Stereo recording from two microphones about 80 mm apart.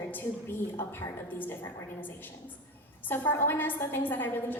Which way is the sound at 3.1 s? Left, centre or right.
Left.